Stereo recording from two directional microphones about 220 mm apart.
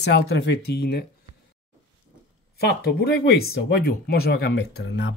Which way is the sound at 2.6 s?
50° left (ahead or behind).